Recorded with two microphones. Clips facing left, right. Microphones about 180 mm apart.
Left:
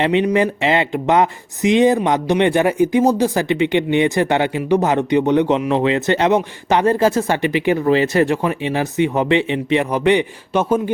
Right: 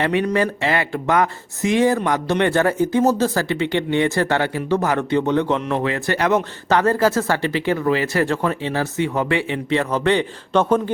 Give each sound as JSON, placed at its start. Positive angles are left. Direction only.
{"t": 0.0, "sound": "speech", "side_deg": 20}